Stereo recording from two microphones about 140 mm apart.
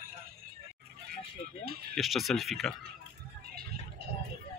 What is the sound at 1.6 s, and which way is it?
Music, 90° right.